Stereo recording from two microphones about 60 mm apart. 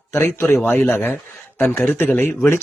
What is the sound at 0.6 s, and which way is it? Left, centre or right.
A man's voice, left.